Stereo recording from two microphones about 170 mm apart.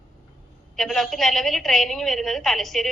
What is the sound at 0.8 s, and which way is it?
A woman's voice, centre (ahead or behind).